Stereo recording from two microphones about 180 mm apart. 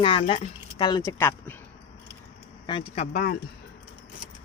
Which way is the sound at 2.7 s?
30° left (ahead or behind).